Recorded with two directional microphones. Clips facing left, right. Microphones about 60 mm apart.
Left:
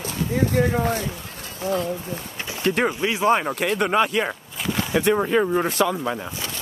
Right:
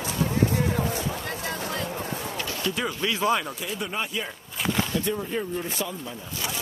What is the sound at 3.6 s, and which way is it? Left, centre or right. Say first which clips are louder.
Speech: left 11 dB; left.